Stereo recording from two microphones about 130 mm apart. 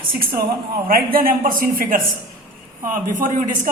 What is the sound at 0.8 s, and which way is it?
Speech, 90° right.